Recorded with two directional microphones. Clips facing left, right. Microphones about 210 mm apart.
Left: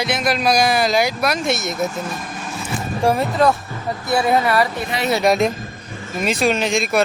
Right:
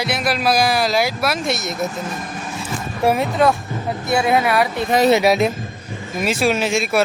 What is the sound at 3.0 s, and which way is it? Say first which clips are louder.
Speech: even; centre (ahead or behind).